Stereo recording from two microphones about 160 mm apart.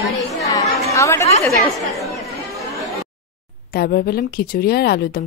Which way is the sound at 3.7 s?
75° left (ahead or behind).